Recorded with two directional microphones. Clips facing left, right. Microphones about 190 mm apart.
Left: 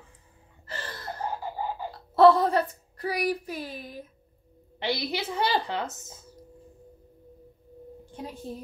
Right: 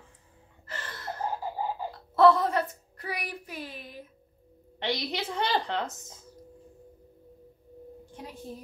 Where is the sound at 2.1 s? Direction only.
35° left (ahead or behind).